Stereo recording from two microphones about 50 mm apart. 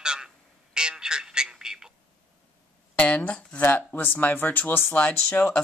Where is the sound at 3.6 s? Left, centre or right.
Left.